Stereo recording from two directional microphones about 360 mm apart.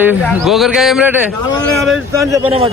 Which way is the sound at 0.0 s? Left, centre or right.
Centre.